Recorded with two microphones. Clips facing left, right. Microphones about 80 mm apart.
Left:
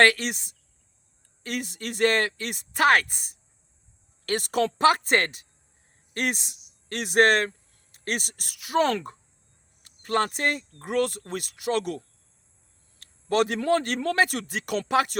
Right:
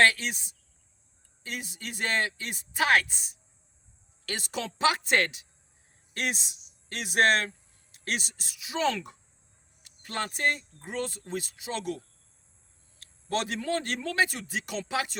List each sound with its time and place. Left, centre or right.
0.0 s a man's voice: left